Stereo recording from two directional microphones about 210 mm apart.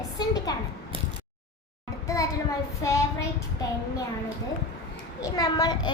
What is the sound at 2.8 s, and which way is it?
Child singing, 15° left (ahead or behind).